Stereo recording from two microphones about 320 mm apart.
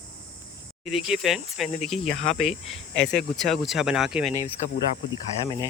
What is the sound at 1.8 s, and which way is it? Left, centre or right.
Speech, centre.